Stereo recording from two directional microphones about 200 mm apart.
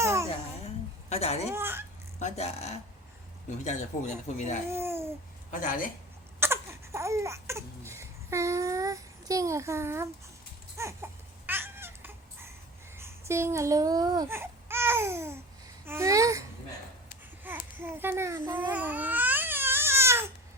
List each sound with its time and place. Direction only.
0.0 s babbling: 15° right (ahead or behind)
1.1 s speech: 30° left (ahead or behind)
1.5 s babbling: 10° right (ahead or behind)
2.1 s speech: 35° left (ahead or behind)
4.7 s babbling: 10° right (ahead or behind)
5.5 s a woman's voice: 40° left (ahead or behind)
6.4 s a sound: 15° right (ahead or behind)
10.8 s baby cry: 15° right (ahead or behind)
13.0 s speech: 15° right (ahead or behind)
15.9 s babbling: 15° right (ahead or behind)
17.4 s babbling: 10° right (ahead or behind)